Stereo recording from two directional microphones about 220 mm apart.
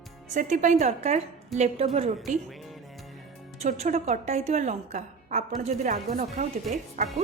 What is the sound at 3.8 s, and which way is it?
A woman's voice, 30° right (ahead or behind).